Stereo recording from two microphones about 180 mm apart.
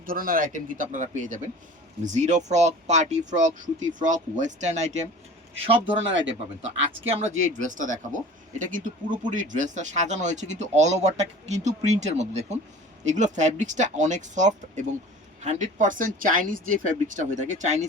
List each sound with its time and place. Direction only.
0.0 s speech: 50° right (ahead or behind); by 6.2 s 30° right (ahead or behind)
7.1 s speech: 40° right (ahead or behind)